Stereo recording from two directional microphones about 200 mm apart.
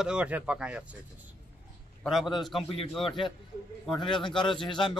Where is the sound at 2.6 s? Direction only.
30° left (ahead or behind).